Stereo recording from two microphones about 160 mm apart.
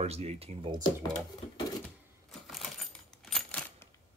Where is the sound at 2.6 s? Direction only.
Centre (ahead or behind).